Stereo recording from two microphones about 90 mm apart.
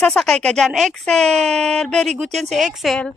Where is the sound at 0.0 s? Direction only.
5° left (ahead or behind).